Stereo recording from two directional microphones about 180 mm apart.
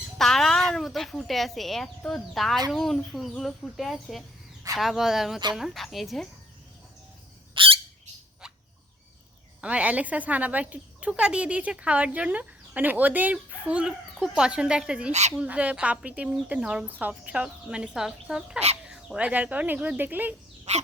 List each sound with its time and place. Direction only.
0.2 s speech: centre (ahead or behind)
7.5 s bird: 30° right (ahead or behind)
9.6 s a woman's voice: 5° right (ahead or behind)
20.7 s dog: 40° right (ahead or behind)